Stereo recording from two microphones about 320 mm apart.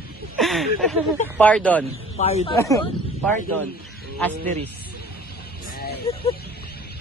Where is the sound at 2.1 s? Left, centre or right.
Centre.